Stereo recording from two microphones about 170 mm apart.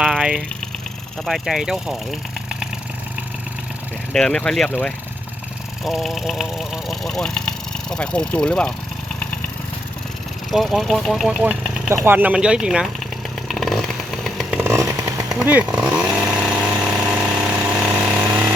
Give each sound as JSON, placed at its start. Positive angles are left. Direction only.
{"t": 0.0, "sound": "vehicle", "side_deg": -5}
{"t": 1.2, "sound": "speech", "side_deg": 0}
{"t": 4.1, "sound": "speech", "side_deg": 5}
{"t": 10.5, "sound": "speech", "side_deg": 0}
{"t": 13.5, "sound": "chainsaw", "side_deg": 0}
{"t": 14.6, "sound": "chainsaw", "side_deg": -15}
{"t": 15.4, "sound": "chainsaw", "side_deg": -5}